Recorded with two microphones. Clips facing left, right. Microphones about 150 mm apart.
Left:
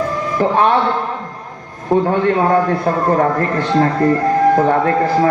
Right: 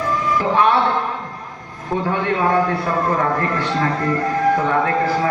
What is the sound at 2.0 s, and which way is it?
A man's voice, 40° left (ahead or behind).